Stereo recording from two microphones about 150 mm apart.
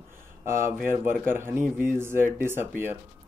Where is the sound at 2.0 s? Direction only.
15° right (ahead or behind).